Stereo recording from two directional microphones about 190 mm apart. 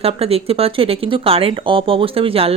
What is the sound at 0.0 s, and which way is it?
Speech, 30° right (ahead or behind).